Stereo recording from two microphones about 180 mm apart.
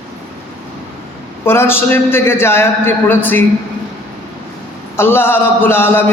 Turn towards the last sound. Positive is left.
turn(degrees=10)  # may be behind; listen again after turning